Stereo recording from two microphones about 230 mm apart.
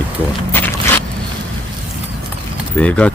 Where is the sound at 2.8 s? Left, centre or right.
Centre.